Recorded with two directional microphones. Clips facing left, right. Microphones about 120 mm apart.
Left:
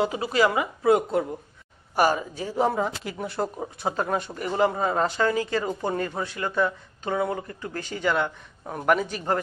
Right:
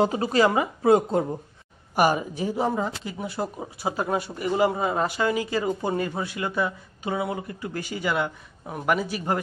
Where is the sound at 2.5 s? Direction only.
Centre (ahead or behind).